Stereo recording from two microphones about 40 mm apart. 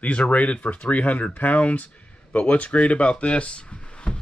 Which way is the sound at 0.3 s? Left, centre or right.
Left.